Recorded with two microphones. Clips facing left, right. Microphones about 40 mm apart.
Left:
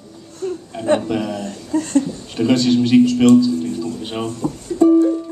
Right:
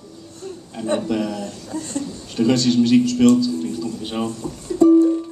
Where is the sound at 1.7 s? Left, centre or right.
Left.